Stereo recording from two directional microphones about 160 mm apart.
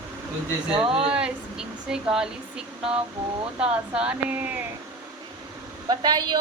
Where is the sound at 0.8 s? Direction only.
35° right (ahead or behind).